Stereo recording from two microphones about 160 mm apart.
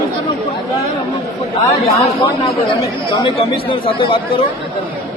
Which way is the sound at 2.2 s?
30° left (ahead or behind).